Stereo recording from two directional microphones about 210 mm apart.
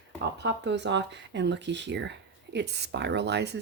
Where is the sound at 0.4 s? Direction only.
55° right (ahead or behind).